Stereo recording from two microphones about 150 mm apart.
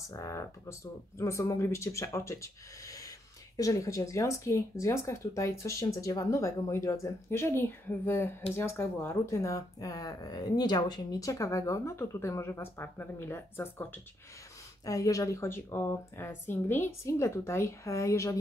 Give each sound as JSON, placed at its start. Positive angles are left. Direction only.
{"t": 0.1, "sound": "speech", "side_deg": 20}
{"t": 14.9, "sound": "speech", "side_deg": 20}